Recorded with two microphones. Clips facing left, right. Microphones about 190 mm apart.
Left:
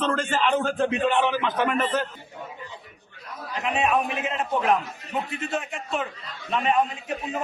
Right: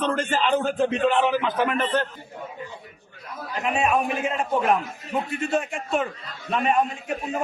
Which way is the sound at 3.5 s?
Centre (ahead or behind).